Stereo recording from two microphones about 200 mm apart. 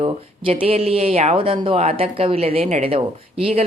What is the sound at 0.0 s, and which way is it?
Speech, 25° right (ahead or behind).